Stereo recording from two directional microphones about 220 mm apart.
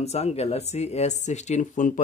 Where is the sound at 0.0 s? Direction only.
30° left (ahead or behind).